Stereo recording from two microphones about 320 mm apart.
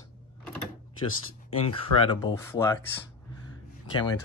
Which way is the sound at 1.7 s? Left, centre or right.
Centre.